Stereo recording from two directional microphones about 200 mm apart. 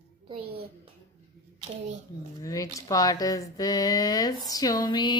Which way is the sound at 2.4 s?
15° left (ahead or behind).